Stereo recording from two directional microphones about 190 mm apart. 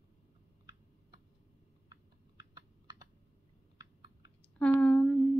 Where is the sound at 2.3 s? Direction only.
20° right (ahead or behind).